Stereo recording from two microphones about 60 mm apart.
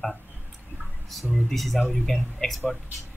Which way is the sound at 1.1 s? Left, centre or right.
Centre.